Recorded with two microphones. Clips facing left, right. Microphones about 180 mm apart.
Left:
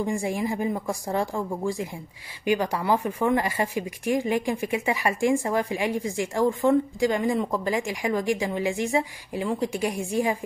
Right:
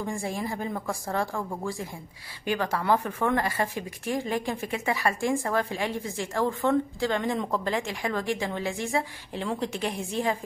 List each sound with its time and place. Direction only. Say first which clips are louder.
0.0 s a woman's voice: left 5 dB; 15° left (ahead or behind)